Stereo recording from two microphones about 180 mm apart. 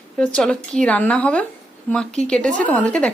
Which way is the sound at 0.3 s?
5° left (ahead or behind).